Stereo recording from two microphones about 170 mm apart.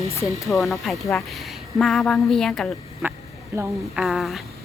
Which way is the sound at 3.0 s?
10° right (ahead or behind).